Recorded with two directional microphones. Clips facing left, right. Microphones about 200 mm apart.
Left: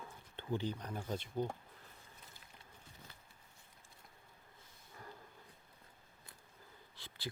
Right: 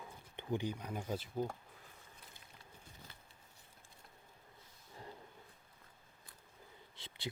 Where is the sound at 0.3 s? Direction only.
15° right (ahead or behind).